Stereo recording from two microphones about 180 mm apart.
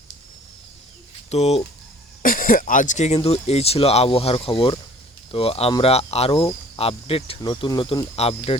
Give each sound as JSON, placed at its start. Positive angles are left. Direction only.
{"t": 1.3, "sound": "speech", "side_deg": 35}
{"t": 2.2, "sound": "speech", "side_deg": 50}